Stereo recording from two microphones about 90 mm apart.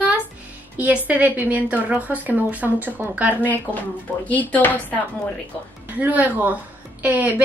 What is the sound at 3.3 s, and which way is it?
Speech, 20° left (ahead or behind).